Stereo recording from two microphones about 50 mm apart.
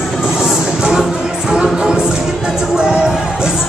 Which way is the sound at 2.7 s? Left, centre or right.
Centre.